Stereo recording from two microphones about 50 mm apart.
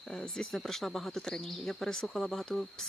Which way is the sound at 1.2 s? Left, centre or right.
Centre.